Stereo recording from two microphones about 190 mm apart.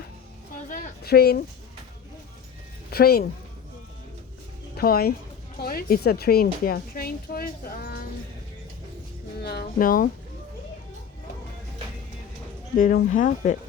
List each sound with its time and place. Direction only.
0.7 s speech: 55° left (ahead or behind)
2.9 s a woman's voice: 55° left (ahead or behind)
4.8 s a woman's voice: 55° left (ahead or behind)
9.4 s a woman's voice: 55° left (ahead or behind)
12.7 s a woman's voice: 50° left (ahead or behind)